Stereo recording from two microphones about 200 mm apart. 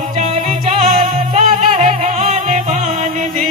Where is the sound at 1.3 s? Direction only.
35° right (ahead or behind).